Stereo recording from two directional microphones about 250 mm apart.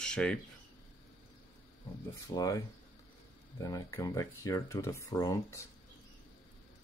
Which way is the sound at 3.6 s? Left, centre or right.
Centre.